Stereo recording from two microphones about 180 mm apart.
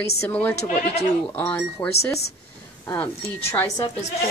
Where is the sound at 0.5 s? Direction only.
40° left (ahead or behind).